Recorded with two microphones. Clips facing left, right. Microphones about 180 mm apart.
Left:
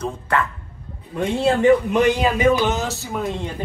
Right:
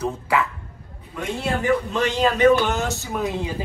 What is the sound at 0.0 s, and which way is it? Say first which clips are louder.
Speech: even; 5° right (ahead or behind).